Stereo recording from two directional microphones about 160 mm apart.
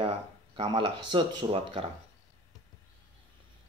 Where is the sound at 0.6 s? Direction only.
30° right (ahead or behind).